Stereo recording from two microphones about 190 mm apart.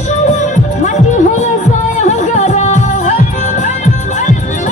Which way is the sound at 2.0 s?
40° left (ahead or behind).